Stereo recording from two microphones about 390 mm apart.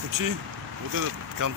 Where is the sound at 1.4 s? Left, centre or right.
Right.